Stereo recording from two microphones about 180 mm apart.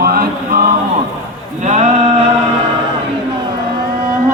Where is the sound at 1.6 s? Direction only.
40° right (ahead or behind).